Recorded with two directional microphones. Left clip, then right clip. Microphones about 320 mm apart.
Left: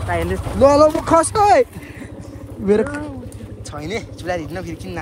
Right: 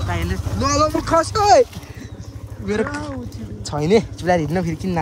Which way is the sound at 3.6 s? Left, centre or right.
Right.